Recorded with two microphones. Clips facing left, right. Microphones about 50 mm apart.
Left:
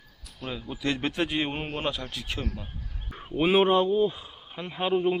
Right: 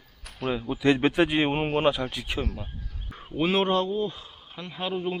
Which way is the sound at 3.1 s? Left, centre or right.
Centre.